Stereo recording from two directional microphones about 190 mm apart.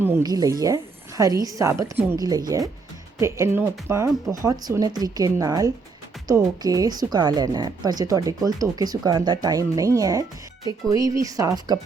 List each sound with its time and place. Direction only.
0.0 s a woman's voice: 15° right (ahead or behind)